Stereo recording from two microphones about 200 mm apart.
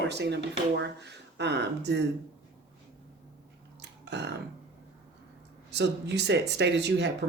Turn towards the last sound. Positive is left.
turn(degrees=-60)  # may be behind; listen again after turning